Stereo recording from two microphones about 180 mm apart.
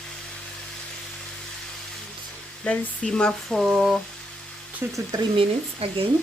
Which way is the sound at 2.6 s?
5° left (ahead or behind).